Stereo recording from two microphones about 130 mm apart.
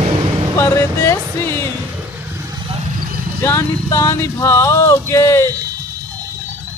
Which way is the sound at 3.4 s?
20° left (ahead or behind).